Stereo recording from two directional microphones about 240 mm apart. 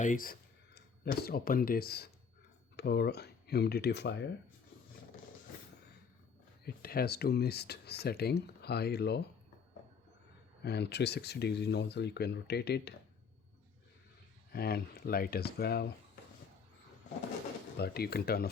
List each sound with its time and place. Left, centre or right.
0.0 s speech: left
6.7 s speech: left
10.6 s speech: left
14.5 s speech: left
17.7 s speech: left